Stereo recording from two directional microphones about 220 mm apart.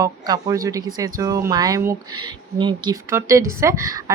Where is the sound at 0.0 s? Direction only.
15° right (ahead or behind).